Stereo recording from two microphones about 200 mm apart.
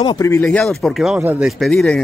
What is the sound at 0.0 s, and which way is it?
Speech, 15° left (ahead or behind).